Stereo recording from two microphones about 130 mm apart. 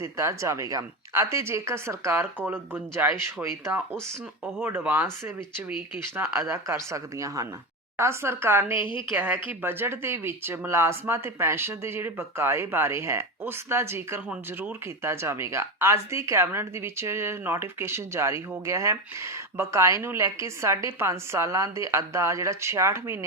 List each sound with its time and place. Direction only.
0.0 s speech: 25° right (ahead or behind)
6.1 s speech: 20° right (ahead or behind)
8.8 s a woman's voice: 40° left (ahead or behind)
9.1 s speech: 15° right (ahead or behind)